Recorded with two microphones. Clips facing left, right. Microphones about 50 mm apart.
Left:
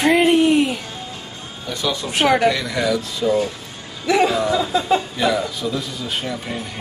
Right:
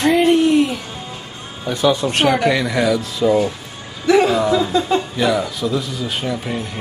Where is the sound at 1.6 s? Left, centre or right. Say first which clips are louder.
Right 7 dB; right.